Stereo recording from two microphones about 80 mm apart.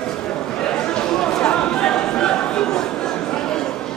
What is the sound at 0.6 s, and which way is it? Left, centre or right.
Chatter, centre.